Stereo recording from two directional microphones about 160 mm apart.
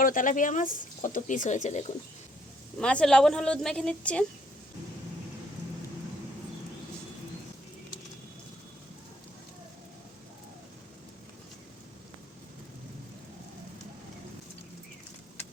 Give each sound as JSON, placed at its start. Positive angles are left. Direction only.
{"t": 0.0, "sound": "speech", "side_deg": 60}
{"t": 2.7, "sound": "a woman's voice", "side_deg": 5}